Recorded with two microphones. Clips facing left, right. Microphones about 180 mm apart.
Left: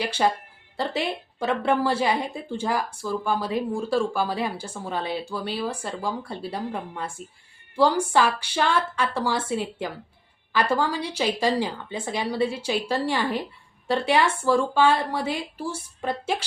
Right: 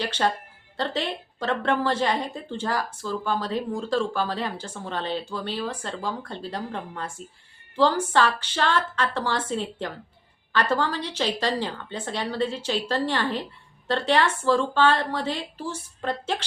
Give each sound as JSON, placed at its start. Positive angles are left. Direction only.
{"t": 0.0, "sound": "a woman's voice", "side_deg": 10}